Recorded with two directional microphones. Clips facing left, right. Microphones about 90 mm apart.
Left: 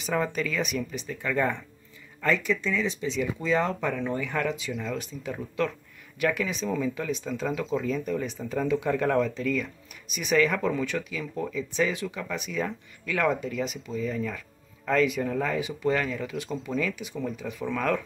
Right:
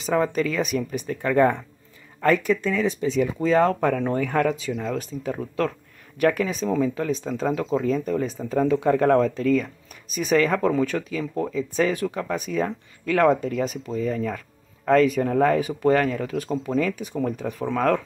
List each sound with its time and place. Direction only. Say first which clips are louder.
0.0 s speech: right 6 dB; 35° right (ahead or behind)